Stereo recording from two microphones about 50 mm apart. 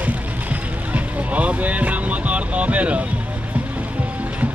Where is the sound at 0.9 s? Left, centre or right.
Right.